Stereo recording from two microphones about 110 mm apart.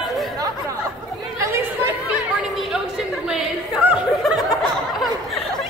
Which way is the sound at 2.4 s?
Centre (ahead or behind).